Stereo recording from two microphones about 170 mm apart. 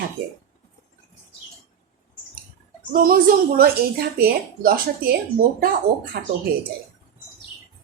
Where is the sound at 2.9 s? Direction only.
55° right (ahead or behind).